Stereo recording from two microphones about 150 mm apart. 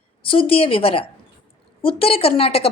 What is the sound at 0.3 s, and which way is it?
A woman's voice, 35° left (ahead or behind).